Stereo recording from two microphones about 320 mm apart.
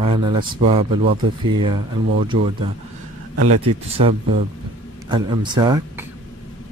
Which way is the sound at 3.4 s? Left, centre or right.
Right.